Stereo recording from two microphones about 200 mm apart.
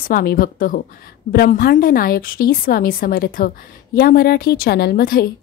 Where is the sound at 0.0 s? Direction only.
50° left (ahead or behind).